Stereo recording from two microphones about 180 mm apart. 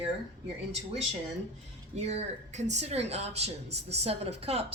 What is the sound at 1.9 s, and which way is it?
Speech, 40° right (ahead or behind).